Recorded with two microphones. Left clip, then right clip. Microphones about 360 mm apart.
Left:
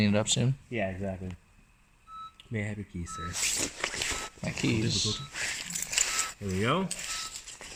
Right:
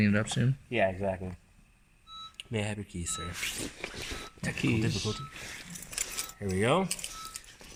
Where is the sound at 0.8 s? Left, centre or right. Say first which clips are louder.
Right 5 dB; right.